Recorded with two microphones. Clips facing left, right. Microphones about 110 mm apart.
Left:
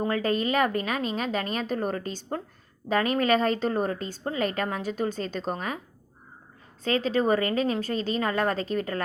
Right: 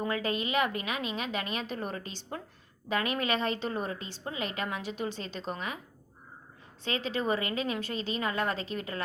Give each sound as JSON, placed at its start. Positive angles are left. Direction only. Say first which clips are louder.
{"t": 0.0, "sound": "a woman's voice", "louder": "left 6 dB", "side_deg": 40}
{"t": 6.8, "sound": "a woman's voice", "louder": "left 7 dB", "side_deg": 40}